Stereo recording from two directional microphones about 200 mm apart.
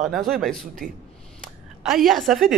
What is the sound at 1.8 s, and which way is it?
Speech, centre (ahead or behind).